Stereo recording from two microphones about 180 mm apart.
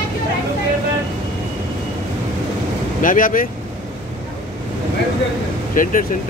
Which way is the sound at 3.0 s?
50° left (ahead or behind).